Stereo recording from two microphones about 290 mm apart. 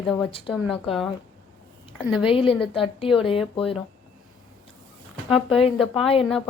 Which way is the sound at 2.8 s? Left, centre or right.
Centre.